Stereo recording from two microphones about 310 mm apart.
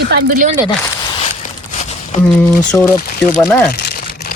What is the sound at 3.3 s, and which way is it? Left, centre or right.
Speech, centre.